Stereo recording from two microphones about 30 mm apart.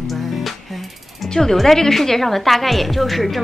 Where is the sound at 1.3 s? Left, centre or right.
Centre.